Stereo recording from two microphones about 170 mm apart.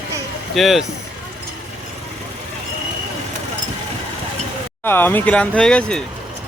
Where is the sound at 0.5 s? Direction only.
Centre (ahead or behind).